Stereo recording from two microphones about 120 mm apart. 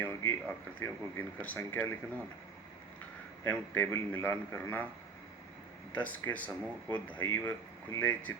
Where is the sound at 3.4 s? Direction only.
15° left (ahead or behind).